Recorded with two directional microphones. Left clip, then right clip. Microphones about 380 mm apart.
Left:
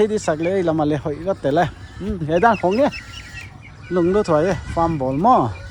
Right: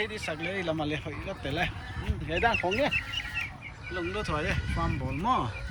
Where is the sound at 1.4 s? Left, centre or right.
Centre.